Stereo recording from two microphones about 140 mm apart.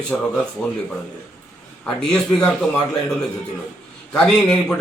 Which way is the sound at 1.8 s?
5° left (ahead or behind).